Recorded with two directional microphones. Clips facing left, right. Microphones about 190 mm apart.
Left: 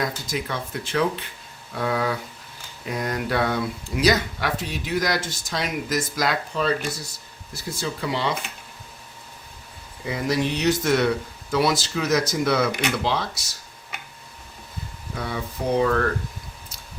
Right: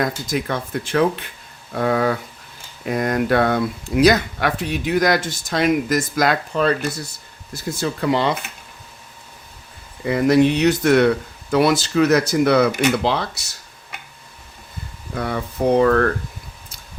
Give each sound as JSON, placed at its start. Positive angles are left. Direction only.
{"t": 0.3, "sound": "speech", "side_deg": -50}
{"t": 7.8, "sound": "speech", "side_deg": -55}
{"t": 10.0, "sound": "speech", "side_deg": -60}
{"t": 15.1, "sound": "speech", "side_deg": -60}